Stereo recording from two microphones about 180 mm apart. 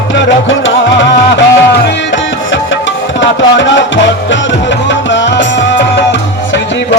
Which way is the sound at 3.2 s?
85° left.